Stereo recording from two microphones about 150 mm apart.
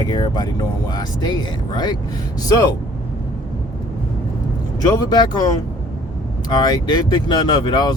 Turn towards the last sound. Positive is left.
turn(degrees=30)  # may be behind; listen again after turning